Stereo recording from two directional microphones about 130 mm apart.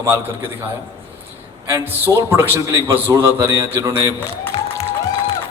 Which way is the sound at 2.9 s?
20° right (ahead or behind).